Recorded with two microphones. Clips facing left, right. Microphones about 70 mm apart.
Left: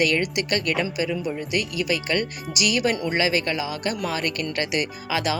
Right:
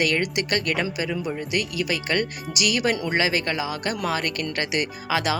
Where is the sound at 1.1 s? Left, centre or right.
Centre.